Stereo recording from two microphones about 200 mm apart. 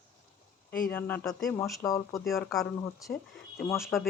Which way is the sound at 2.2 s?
Centre (ahead or behind).